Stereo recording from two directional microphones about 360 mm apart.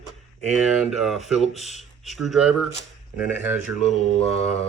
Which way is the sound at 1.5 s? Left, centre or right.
Centre.